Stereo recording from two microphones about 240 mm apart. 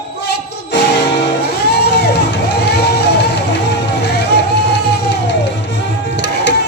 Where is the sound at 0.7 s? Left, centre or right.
Left.